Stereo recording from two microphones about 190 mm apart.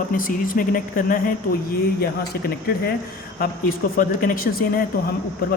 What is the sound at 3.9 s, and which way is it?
Speech, 50° left (ahead or behind).